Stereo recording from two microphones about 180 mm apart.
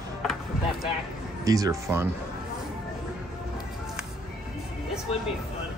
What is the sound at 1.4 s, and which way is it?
Speech, 20° right (ahead or behind).